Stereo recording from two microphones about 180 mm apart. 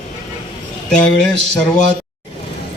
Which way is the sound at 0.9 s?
5° left (ahead or behind).